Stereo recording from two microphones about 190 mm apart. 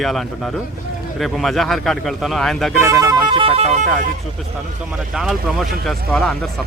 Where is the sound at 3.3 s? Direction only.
30° right (ahead or behind).